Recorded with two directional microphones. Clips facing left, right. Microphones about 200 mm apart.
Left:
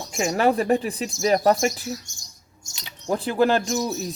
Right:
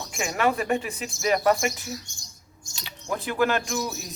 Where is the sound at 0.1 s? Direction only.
40° left (ahead or behind).